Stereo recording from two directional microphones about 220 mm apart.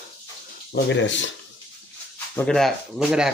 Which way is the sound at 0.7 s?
55° left (ahead or behind).